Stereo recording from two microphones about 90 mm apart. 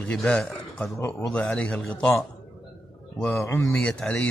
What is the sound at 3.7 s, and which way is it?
Speech, 10° left (ahead or behind).